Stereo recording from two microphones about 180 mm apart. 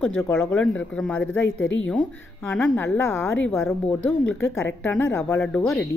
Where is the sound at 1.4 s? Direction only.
90° left.